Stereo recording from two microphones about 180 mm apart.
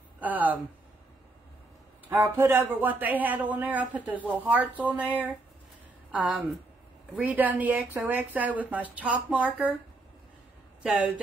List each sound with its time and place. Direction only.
0.2 s a sound: 10° right (ahead or behind)
2.0 s speech: 10° right (ahead or behind)
10.8 s speech: 10° right (ahead or behind)